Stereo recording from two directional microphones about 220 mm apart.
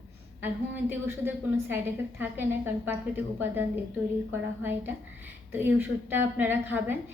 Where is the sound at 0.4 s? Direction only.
10° right (ahead or behind).